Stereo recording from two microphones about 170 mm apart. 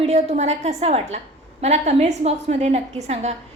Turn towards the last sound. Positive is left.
turn(degrees=-40)  # may be behind; listen again after turning